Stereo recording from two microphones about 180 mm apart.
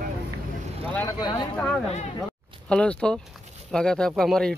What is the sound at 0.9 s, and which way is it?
Vehicle, 20° left (ahead or behind).